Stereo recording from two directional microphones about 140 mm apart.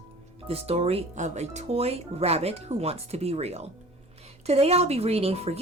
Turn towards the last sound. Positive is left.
turn(degrees=-45)  # may be behind; listen again after turning